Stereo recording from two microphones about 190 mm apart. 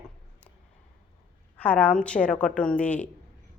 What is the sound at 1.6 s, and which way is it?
Speech, 10° left (ahead or behind).